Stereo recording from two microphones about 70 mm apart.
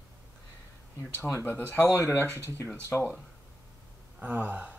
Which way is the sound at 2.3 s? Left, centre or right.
Right.